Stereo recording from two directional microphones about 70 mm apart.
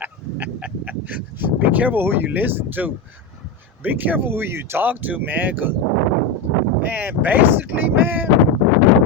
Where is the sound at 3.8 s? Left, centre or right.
Right.